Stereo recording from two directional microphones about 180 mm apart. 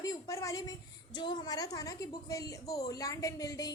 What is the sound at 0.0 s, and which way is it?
A woman's voice, 20° left (ahead or behind).